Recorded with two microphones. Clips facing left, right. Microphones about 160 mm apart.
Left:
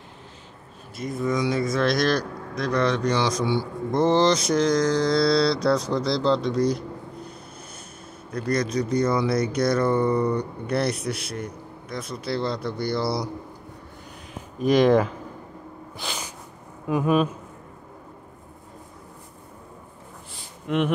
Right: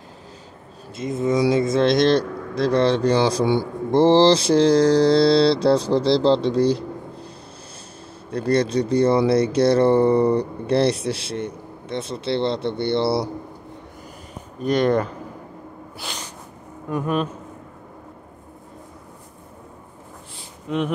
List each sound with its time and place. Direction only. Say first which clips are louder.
0.9 s speech: right 5 dB; 25° right (ahead or behind)
8.3 s speech: right 5 dB; 30° right (ahead or behind)
14.6 s speech: left 1 dB; 90° left
16.0 s snort: left 1 dB; centre (ahead or behind)
16.9 s speech: left 2 dB; 10° left (ahead or behind)